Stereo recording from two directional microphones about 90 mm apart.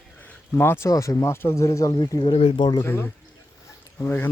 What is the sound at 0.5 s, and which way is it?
Speech, 25° left (ahead or behind).